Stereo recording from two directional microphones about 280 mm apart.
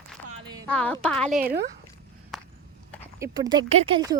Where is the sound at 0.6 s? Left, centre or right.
Centre.